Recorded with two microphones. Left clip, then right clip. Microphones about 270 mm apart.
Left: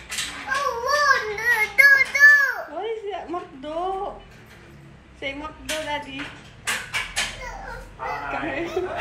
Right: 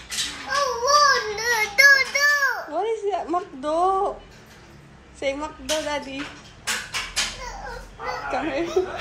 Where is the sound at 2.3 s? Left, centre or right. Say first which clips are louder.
Left 1 dB; centre.